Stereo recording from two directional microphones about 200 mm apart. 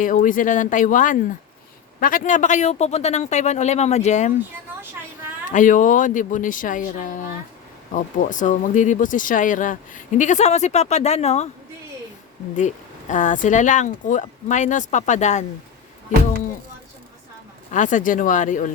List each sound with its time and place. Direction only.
0.0 s speech: 40° left (ahead or behind)
5.5 s speech: 40° left (ahead or behind)
12.5 s speech: 40° left (ahead or behind)
17.7 s speech: 40° left (ahead or behind)